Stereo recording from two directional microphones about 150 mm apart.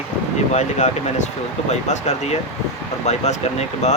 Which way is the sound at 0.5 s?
55° left (ahead or behind).